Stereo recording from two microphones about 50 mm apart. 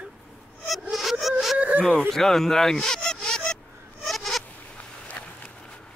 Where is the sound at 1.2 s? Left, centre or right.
Centre.